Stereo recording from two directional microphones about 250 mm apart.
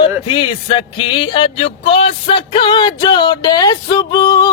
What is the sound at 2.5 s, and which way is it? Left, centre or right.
Music, centre.